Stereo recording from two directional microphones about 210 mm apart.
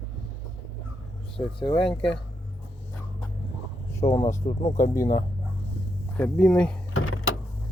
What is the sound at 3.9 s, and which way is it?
Speech, 15° left (ahead or behind).